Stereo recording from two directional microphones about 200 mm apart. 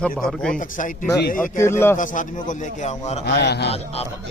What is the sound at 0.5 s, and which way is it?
Speech, 40° left (ahead or behind).